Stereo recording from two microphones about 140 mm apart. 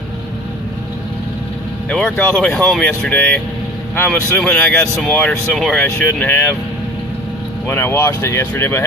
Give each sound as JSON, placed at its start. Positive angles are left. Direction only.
{"t": 1.9, "sound": "speech", "side_deg": 5}
{"t": 7.6, "sound": "speech", "side_deg": 15}